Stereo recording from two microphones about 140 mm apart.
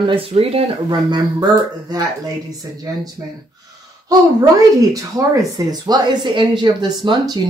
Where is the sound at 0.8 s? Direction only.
30° right (ahead or behind).